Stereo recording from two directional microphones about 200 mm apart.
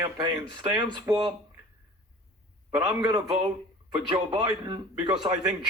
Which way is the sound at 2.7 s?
25° right (ahead or behind).